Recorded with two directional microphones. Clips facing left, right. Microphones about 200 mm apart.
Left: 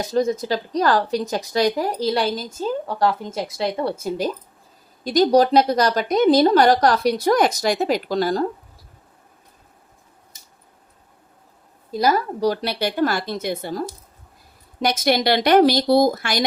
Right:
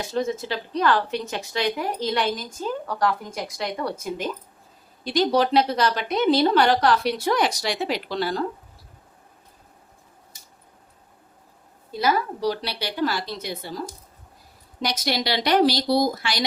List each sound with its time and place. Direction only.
0.0 s a woman's voice: 40° left (ahead or behind)
5.0 s a woman's voice: 40° left (ahead or behind)
11.9 s a woman's voice: 40° left (ahead or behind)